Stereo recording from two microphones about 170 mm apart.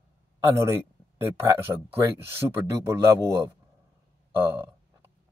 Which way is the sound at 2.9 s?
15° right (ahead or behind).